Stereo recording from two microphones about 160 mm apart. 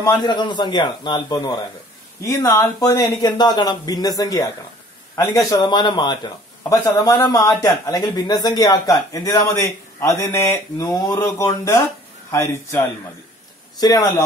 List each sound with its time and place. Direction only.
0.0 s a man's voice: 25° left (ahead or behind)